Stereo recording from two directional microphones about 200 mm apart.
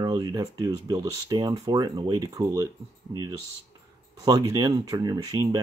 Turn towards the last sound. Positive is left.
turn(degrees=-20)  # may be behind; listen again after turning